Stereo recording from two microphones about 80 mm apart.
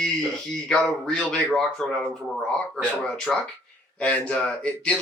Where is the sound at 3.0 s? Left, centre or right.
Centre.